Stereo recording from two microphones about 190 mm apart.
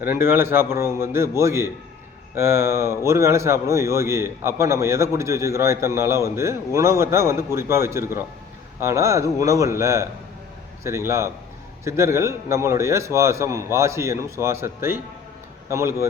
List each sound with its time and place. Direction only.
0.0 s speech: 10° right (ahead or behind)